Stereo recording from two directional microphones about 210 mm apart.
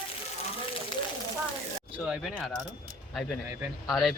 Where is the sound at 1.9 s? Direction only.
5° right (ahead or behind).